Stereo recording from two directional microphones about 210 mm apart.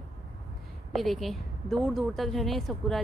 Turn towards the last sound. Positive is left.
turn(degrees=0)  # may be behind; listen again after turning